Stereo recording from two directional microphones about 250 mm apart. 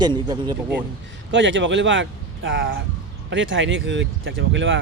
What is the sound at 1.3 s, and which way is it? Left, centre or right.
Speech, right.